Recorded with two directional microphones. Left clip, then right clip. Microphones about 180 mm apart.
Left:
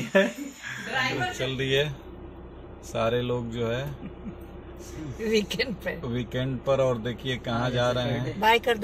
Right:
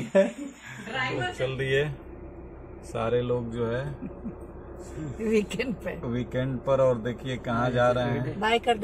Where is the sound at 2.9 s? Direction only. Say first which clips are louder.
Even; 10° left (ahead or behind).